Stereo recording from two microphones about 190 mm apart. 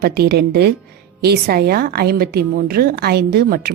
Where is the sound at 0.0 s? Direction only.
55° right (ahead or behind).